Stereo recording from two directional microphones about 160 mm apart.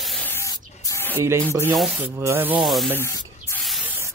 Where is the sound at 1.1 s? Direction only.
15° right (ahead or behind).